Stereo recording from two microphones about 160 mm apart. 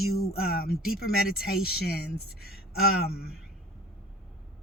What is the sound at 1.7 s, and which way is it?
Speech, 90° left.